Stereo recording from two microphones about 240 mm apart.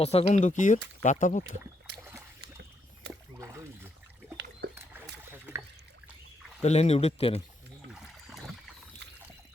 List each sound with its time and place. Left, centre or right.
0.0 s speech: left
2.0 s boat: centre
3.1 s rowboat: centre
4.4 s a sound: right
4.7 s rowboat: centre
6.6 s speech: left
7.9 s boat: centre